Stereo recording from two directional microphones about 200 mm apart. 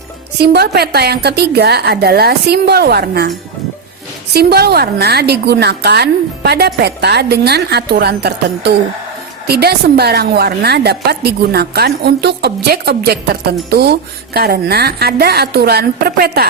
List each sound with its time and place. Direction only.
0.3 s a woman's voice: 55° right (ahead or behind)
4.4 s a woman's voice: 55° right (ahead or behind)